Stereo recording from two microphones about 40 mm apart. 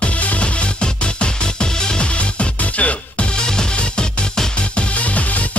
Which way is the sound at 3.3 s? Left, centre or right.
Centre.